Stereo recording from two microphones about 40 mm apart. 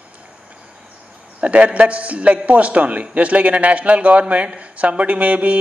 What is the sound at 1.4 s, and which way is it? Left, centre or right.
A man's voice, right.